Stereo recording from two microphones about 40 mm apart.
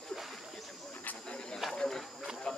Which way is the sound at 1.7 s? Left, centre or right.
Centre.